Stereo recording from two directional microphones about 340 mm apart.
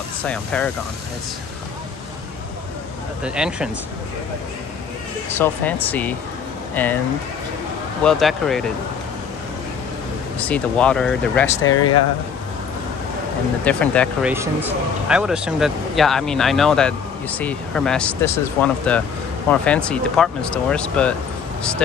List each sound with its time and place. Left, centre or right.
0.3 s speech: centre
3.3 s speech: centre
5.3 s speech: centre
8.0 s speech: centre
10.4 s speech: centre
11.6 s speech: left
13.7 s speech: centre
14.3 s speech: centre